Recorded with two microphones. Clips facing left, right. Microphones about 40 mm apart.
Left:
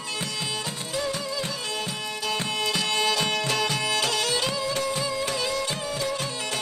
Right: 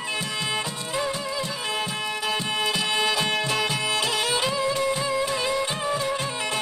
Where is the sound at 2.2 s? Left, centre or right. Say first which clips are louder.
Right 1 dB; centre.